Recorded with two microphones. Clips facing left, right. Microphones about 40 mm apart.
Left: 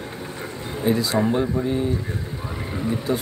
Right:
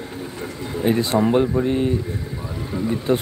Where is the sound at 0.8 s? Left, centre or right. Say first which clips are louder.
Right 2 dB; right.